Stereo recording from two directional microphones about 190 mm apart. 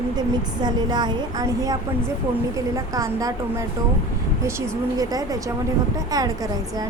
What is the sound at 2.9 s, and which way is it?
Speech, 15° right (ahead or behind).